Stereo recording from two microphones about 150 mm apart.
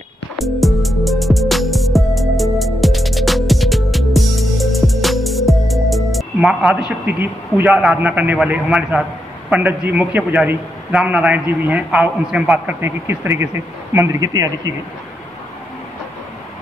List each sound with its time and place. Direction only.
0.4 s music: centre (ahead or behind)
7.1 s a man's voice: 10° right (ahead or behind)